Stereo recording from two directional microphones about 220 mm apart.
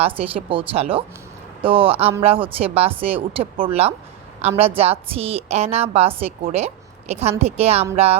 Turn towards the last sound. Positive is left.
turn(degrees=-30)  # may be behind; listen again after turning